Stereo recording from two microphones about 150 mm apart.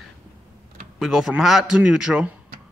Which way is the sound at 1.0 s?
5° right (ahead or behind).